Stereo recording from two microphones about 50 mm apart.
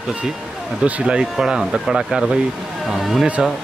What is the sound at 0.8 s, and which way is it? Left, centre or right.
Speech, centre.